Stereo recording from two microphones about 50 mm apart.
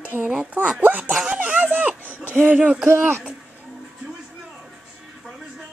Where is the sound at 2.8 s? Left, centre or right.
Right.